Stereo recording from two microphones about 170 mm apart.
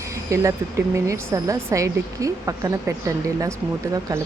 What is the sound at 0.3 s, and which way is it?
A woman's voice, 20° right (ahead or behind).